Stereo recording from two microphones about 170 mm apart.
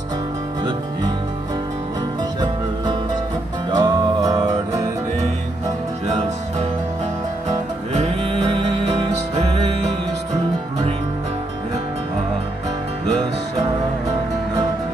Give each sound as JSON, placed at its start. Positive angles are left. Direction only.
{"t": 3.7, "sound": "music", "side_deg": -25}